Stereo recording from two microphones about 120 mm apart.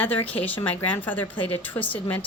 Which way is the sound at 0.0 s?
15° left (ahead or behind).